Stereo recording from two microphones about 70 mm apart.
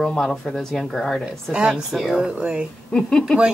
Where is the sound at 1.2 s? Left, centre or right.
Centre.